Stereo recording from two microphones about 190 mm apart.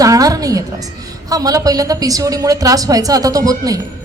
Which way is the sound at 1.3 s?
20° right (ahead or behind).